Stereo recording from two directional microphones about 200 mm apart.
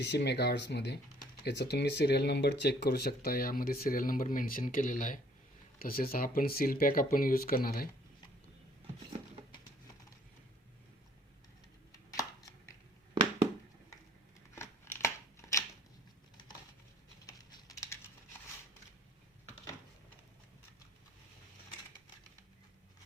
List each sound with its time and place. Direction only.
0.0 s speech: 60° left (ahead or behind)
11.9 s chopping: 15° left (ahead or behind)
14.5 s scissors: 15° left (ahead or behind)
17.2 s typing: 15° left (ahead or behind)